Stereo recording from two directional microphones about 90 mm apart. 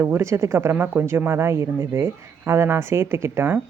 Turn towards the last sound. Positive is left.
turn(degrees=-25)  # may be behind; listen again after turning